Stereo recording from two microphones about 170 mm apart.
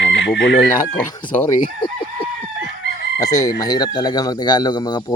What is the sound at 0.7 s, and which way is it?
Speech, 25° left (ahead or behind).